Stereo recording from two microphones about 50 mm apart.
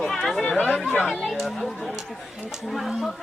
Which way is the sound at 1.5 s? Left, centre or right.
Centre.